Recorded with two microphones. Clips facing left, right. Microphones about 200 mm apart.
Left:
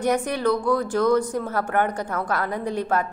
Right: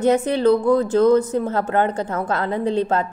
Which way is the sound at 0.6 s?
25° right (ahead or behind).